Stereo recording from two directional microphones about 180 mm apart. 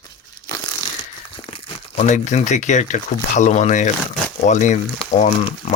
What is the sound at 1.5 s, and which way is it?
Speech, 40° left (ahead or behind).